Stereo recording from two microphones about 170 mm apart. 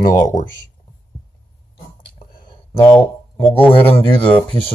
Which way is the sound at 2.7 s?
15° left (ahead or behind).